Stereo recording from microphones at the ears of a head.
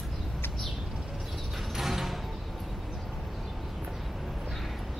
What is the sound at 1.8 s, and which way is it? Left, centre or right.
Music, centre.